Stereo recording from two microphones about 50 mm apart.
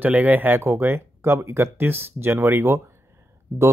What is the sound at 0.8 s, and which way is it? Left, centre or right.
Speech, right.